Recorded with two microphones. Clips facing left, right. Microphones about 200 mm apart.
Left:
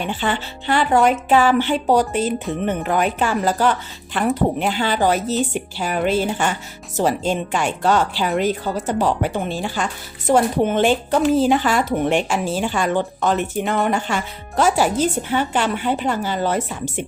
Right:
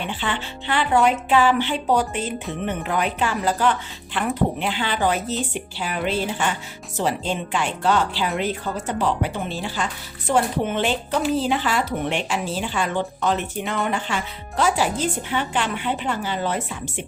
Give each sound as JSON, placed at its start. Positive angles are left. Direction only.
{"t": 0.1, "sound": "speech", "side_deg": 45}